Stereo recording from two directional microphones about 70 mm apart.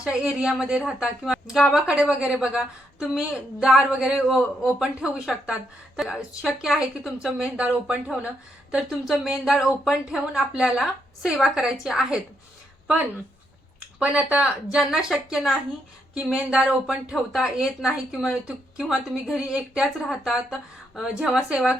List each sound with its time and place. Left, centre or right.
0.0 s a woman's voice: centre
7.4 s speech: centre
8.7 s a woman's voice: centre
14.0 s speech: centre
14.4 s a woman's voice: centre